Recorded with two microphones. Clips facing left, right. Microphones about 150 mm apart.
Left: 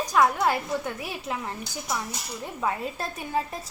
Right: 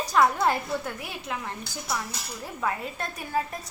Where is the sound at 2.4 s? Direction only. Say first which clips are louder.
Left 1 dB; 20° left (ahead or behind).